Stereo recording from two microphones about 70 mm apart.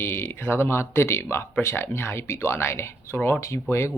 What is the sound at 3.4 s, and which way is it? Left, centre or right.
Speech, left.